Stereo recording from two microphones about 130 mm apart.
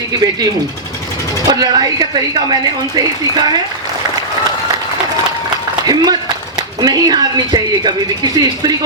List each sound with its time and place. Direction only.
1.5 s speech: 30° right (ahead or behind)
5.8 s speech: 30° right (ahead or behind)